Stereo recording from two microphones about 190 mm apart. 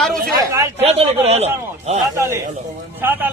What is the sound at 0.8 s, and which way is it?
Speech, 30° right (ahead or behind).